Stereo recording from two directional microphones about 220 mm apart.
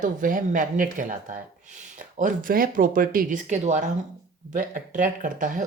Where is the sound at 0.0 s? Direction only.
40° right (ahead or behind).